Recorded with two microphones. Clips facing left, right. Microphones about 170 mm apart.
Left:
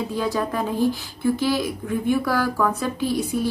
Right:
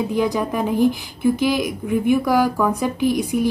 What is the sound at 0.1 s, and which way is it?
Speech, 15° right (ahead or behind).